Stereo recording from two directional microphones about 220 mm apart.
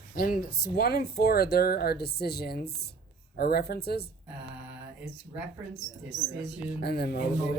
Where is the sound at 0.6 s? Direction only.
45° left (ahead or behind).